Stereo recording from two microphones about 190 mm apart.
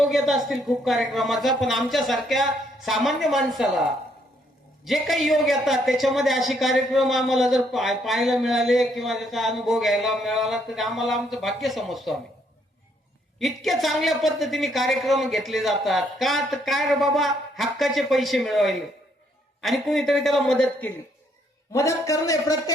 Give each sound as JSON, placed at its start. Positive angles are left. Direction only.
{"t": 0.0, "sound": "a woman's voice", "side_deg": 0}
{"t": 13.4, "sound": "a woman's voice", "side_deg": 0}
{"t": 21.7, "sound": "a man's voice", "side_deg": 15}